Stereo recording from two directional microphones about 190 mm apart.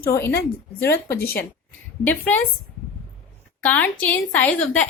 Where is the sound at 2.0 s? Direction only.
10° left (ahead or behind).